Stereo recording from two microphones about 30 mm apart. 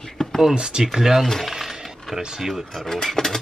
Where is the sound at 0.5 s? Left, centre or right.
Right.